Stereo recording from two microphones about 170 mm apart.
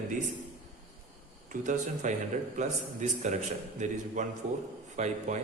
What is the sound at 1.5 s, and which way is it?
Speech, 50° right (ahead or behind).